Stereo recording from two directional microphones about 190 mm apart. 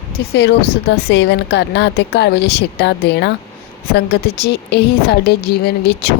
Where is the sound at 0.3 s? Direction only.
60° left (ahead or behind).